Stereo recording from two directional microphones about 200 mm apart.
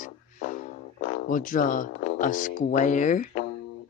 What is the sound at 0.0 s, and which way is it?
Music, 40° left (ahead or behind).